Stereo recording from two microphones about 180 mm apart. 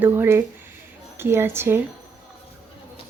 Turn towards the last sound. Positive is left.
turn(degrees=-15)  # may be behind; listen again after turning